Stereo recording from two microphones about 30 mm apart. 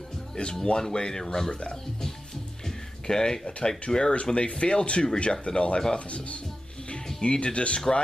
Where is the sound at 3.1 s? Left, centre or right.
Left.